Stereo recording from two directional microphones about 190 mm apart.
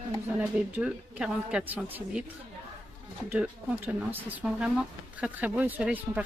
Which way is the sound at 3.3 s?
5° right (ahead or behind).